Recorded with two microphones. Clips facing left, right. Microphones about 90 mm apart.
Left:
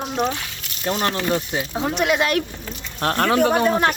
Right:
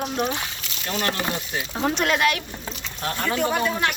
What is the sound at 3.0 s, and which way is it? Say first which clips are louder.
Speech: left 6 dB; 70° left (ahead or behind).